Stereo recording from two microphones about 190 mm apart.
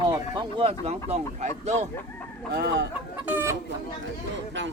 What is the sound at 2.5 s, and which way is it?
Speech, 60° right (ahead or behind).